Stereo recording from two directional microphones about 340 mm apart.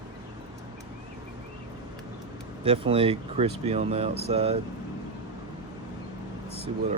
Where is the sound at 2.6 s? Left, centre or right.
Centre.